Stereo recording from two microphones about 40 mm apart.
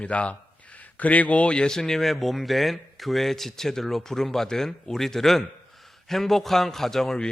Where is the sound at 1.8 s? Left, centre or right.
Centre.